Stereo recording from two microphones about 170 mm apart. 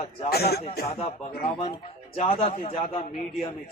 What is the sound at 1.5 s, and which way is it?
A man's voice, 30° left (ahead or behind).